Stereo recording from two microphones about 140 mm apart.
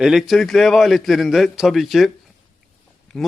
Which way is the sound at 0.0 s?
Centre (ahead or behind).